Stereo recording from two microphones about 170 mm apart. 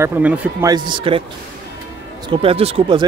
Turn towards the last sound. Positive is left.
turn(degrees=-30)  # may be behind; listen again after turning